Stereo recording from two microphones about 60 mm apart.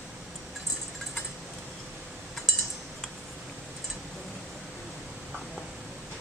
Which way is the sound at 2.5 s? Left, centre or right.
Centre.